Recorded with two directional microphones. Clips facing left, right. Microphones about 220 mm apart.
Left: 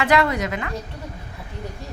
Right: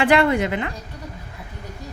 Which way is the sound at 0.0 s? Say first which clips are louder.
Right 3 dB; 30° right (ahead or behind).